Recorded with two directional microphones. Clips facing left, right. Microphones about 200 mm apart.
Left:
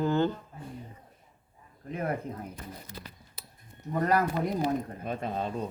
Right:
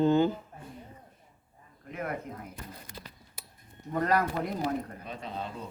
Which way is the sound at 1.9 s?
30° left (ahead or behind).